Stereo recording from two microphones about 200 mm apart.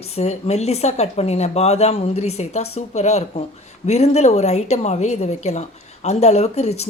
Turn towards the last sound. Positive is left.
turn(degrees=35)  # may be behind; listen again after turning